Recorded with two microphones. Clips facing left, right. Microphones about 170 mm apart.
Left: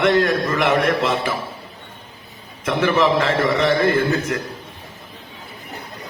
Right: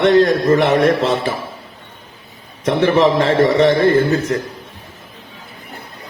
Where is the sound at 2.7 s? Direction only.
35° right (ahead or behind).